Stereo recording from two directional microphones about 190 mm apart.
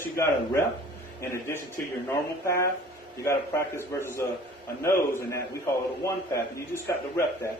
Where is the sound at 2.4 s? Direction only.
15° left (ahead or behind).